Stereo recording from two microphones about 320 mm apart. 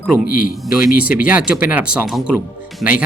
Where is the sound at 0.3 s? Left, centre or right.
Left.